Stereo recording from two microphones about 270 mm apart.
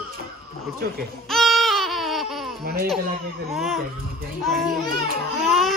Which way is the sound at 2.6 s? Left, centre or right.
Right.